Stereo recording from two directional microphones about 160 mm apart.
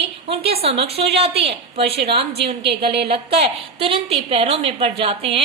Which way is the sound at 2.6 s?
90° right.